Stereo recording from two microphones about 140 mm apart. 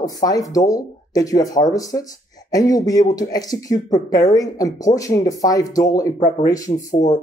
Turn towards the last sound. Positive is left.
turn(degrees=55)  # may be behind; listen again after turning